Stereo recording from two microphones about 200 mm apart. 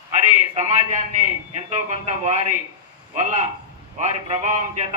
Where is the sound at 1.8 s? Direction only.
35° right (ahead or behind).